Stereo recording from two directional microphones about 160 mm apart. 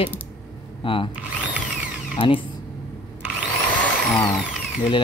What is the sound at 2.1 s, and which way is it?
Speech, 35° left (ahead or behind).